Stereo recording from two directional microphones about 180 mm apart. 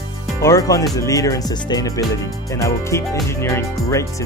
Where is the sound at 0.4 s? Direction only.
15° left (ahead or behind).